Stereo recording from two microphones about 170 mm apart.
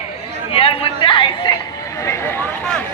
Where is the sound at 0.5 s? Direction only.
35° left (ahead or behind).